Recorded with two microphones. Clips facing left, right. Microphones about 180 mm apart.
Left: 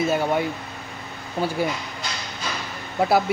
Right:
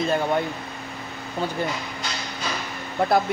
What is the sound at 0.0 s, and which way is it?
Speech, 5° left (ahead or behind).